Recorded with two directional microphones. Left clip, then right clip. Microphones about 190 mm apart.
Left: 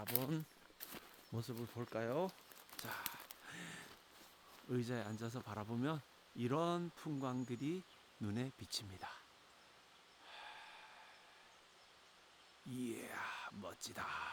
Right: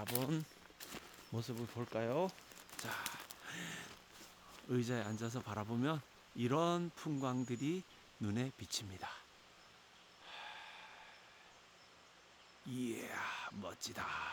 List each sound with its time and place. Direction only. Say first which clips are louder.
0.0 s speech: right 3 dB; 20° left (ahead or behind)
2.7 s a sound: right 3 dB; centre (ahead or behind)
4.5 s speech: right 3 dB; centre (ahead or behind)
10.2 s gasp: right 4 dB; centre (ahead or behind)
12.7 s speech: right 3 dB; 5° left (ahead or behind)